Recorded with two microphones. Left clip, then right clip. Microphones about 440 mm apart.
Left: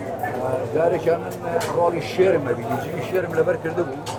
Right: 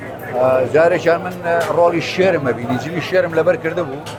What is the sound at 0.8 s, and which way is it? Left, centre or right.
Speech, right.